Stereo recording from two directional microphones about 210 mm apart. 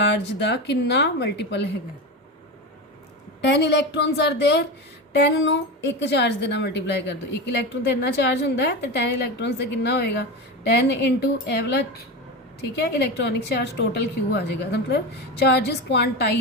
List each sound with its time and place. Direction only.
0.0 s a woman's voice: 55° left (ahead or behind)
3.4 s a woman's voice: 55° left (ahead or behind)